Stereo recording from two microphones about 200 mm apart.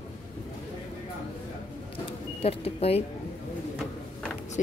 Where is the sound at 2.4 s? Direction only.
30° left (ahead or behind).